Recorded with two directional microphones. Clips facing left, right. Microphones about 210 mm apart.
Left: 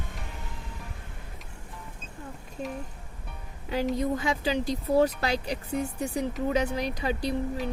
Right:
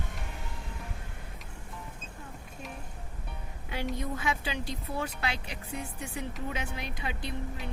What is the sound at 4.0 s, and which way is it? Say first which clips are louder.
Speech: left 6 dB; 35° left (ahead or behind).